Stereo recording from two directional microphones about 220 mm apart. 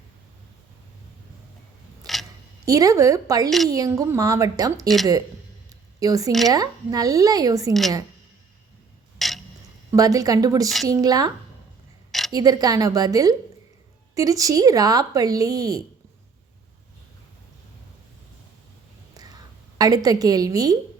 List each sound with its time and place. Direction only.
2.0 s a sound: 15° right (ahead or behind)
2.6 s speech: 15° right (ahead or behind)
6.0 s speech: 15° right (ahead or behind)
7.7 s a woman's voice: centre (ahead or behind)
9.1 s clock: centre (ahead or behind)
9.9 s speech: 15° right (ahead or behind)
12.3 s speech: 15° right (ahead or behind)
19.1 s whispering: 15° right (ahead or behind)
19.8 s speech: 15° right (ahead or behind)